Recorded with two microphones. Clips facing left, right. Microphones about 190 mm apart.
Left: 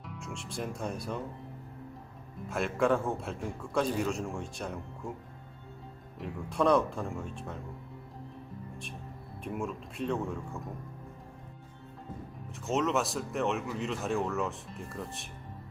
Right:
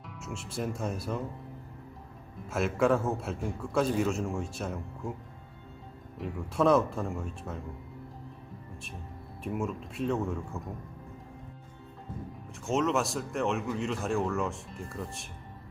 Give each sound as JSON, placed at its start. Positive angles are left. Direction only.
{"t": 0.0, "sound": "speech", "side_deg": 0}
{"t": 2.5, "sound": "a man's voice", "side_deg": 0}
{"t": 6.1, "sound": "a man's voice", "side_deg": 0}
{"t": 9.4, "sound": "a man's voice", "side_deg": 0}
{"t": 12.6, "sound": "a man's voice", "side_deg": 0}